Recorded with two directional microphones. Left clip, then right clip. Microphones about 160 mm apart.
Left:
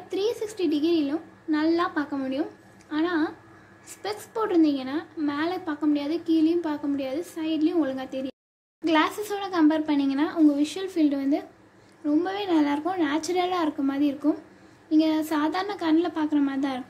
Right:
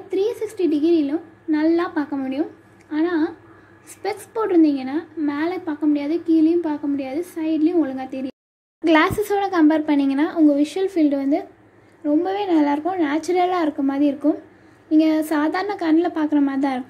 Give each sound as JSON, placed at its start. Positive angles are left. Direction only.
{"t": 0.1, "sound": "a woman's voice", "side_deg": -10}
{"t": 8.8, "sound": "a child's voice", "side_deg": -30}